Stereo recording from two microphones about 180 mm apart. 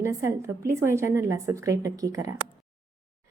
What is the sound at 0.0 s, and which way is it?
Speech, 15° right (ahead or behind).